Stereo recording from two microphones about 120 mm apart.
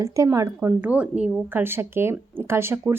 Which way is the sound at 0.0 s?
25° right (ahead or behind).